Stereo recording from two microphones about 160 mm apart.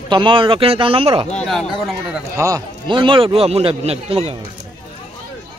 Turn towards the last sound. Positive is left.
turn(degrees=-40)  # may be behind; listen again after turning